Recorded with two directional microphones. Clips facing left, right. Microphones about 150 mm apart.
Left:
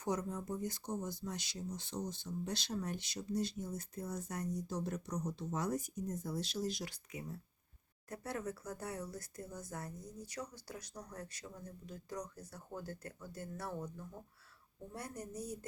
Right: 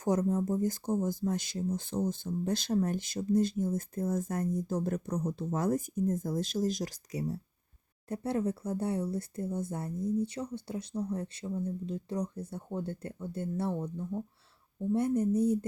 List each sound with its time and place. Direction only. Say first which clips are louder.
0.0 s speech: right 10 dB; 45° right (ahead or behind); by 15.5 s 25° right (ahead or behind)